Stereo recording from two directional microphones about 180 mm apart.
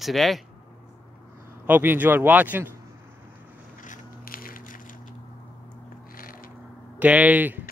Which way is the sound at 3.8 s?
50° left (ahead or behind).